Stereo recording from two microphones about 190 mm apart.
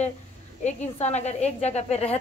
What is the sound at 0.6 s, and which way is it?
A woman's voice, 35° left (ahead or behind).